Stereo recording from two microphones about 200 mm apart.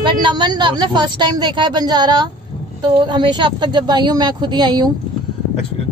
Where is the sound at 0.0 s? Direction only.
25° right (ahead or behind).